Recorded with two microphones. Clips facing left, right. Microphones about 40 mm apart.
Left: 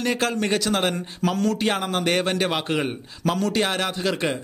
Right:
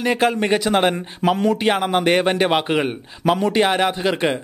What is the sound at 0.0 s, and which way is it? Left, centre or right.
Speech, centre.